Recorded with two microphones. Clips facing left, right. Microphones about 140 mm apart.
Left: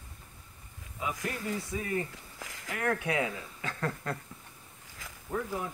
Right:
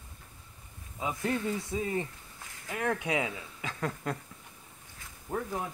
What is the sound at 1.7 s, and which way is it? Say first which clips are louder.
Speech: even; 25° right (ahead or behind).